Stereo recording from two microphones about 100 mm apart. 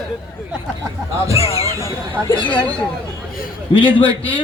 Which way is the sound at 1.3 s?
90° left.